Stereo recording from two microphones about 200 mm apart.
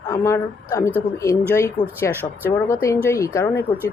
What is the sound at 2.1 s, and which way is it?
Speech, 10° right (ahead or behind).